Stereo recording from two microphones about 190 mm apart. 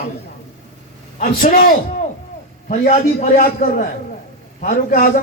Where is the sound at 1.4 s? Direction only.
50° left (ahead or behind).